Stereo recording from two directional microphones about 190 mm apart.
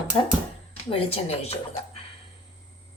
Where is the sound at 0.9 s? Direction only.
30° left (ahead or behind).